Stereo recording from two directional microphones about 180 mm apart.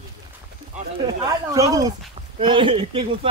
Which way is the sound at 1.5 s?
20° right (ahead or behind).